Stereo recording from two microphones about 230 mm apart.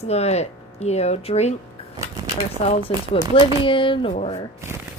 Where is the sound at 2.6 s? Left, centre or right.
Left.